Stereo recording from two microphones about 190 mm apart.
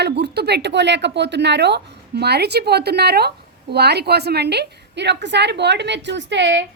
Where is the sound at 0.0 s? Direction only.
60° right (ahead or behind).